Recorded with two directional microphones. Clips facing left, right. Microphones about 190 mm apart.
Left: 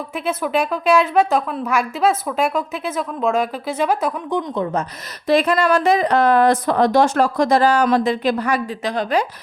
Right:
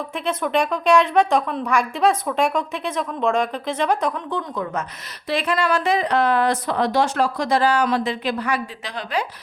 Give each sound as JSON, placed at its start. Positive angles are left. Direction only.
{"t": 0.3, "sound": "a woman's voice", "side_deg": 5}
{"t": 5.3, "sound": "speech", "side_deg": 40}